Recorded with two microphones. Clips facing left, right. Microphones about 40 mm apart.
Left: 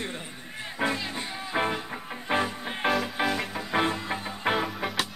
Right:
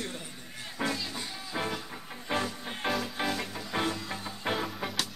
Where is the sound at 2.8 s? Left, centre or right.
Centre.